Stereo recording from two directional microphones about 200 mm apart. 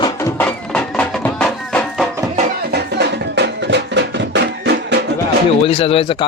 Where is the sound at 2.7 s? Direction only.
55° right (ahead or behind).